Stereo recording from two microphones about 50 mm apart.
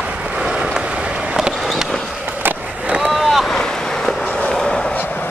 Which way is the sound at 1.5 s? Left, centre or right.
Centre.